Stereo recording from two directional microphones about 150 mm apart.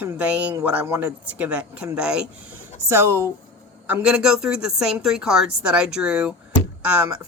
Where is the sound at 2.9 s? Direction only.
15° right (ahead or behind).